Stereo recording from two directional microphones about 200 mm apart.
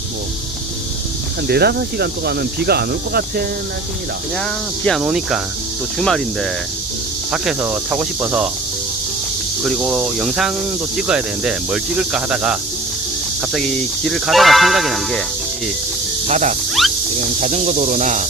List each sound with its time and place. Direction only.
1.5 s speech: 55° right (ahead or behind)
4.9 s speech: centre (ahead or behind)
9.6 s speech: centre (ahead or behind)
16.2 s speech: 35° right (ahead or behind)
16.8 s snake: centre (ahead or behind)
17.2 s speech: 35° right (ahead or behind)